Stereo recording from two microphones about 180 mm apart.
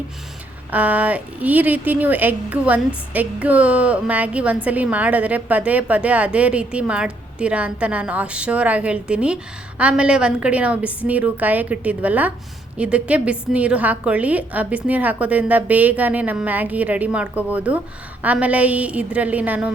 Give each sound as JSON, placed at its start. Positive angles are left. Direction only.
{"t": 0.7, "sound": "a woman's voice", "side_deg": -10}